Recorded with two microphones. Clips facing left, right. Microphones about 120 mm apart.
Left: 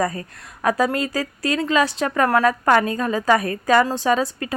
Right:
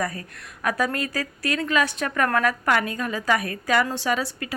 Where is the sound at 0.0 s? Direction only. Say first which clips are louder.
Left 5 dB; 30° left (ahead or behind).